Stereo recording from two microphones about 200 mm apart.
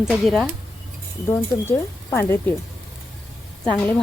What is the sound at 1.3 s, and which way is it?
Speech, 15° left (ahead or behind).